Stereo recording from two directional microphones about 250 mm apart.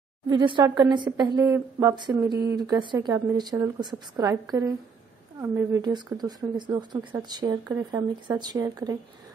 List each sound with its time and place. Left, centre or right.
0.3 s a woman's voice: centre